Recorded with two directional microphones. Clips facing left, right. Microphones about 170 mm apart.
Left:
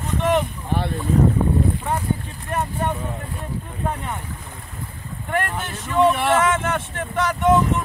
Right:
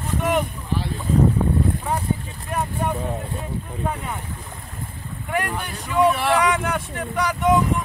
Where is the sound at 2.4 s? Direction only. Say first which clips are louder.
Left 1 dB; 5° right (ahead or behind).